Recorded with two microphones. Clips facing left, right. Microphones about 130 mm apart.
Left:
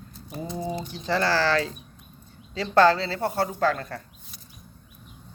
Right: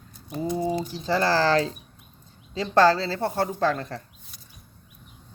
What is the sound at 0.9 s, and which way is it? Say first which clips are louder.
Speech: even; 35° right (ahead or behind).